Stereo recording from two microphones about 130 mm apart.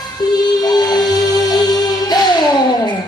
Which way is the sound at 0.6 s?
30° left (ahead or behind).